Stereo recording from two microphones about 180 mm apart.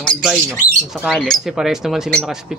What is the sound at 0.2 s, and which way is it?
Speech, 5° right (ahead or behind).